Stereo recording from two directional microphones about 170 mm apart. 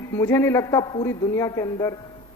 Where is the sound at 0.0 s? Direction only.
15° left (ahead or behind).